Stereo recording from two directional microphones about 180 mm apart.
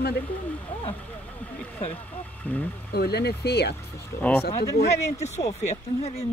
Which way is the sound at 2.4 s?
10° left (ahead or behind).